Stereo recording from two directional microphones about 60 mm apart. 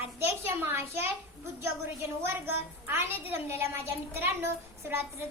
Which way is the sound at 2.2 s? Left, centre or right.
Right.